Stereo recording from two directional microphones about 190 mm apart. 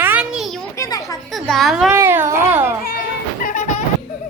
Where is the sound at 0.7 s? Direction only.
15° left (ahead or behind).